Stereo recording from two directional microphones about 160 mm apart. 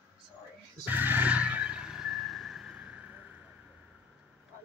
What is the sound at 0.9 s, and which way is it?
Vehicle, 10° right (ahead or behind).